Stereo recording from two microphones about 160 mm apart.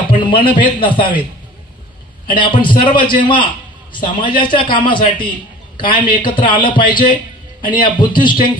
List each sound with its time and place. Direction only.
0.1 s a man's voice: 30° left (ahead or behind)
2.2 s a man's voice: 30° left (ahead or behind)